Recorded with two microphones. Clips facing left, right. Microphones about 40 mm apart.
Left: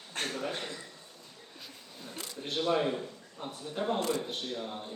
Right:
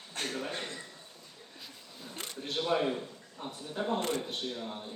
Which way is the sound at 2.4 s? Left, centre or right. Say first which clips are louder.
Left 1 dB; centre.